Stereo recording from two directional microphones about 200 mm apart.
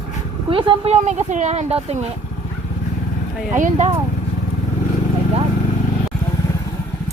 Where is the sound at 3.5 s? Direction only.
35° right (ahead or behind).